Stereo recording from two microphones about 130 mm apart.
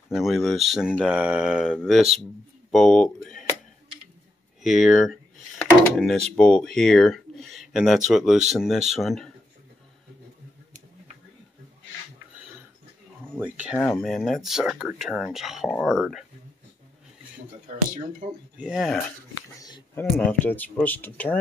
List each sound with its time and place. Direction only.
0.1 s speech: centre (ahead or behind)
4.6 s speech: centre (ahead or behind)
13.4 s speech: 10° right (ahead or behind)
13.7 s speech: 5° left (ahead or behind)
18.6 s speech: centre (ahead or behind)
20.0 s speech: 15° left (ahead or behind)